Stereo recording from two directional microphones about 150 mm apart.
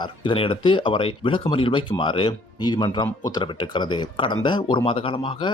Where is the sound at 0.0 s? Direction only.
35° left (ahead or behind).